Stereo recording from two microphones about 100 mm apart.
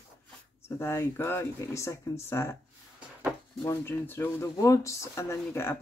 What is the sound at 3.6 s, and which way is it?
Speech, 25° left (ahead or behind).